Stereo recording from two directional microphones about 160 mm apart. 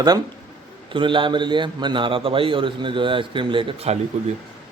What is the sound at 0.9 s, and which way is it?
A man's voice, 30° right (ahead or behind).